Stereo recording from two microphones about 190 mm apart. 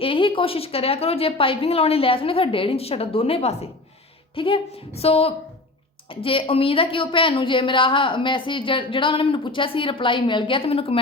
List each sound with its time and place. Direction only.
0.0 s a woman's voice: 25° left (ahead or behind)